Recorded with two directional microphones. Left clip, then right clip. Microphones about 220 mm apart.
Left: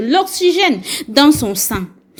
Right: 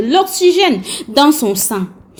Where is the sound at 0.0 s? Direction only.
25° left (ahead or behind).